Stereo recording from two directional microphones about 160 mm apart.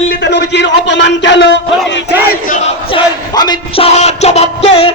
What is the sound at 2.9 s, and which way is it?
Music, 30° left (ahead or behind).